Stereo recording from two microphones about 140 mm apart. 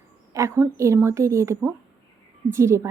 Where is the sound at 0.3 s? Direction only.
20° right (ahead or behind).